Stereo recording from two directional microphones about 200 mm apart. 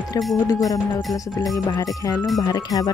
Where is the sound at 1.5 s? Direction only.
20° left (ahead or behind).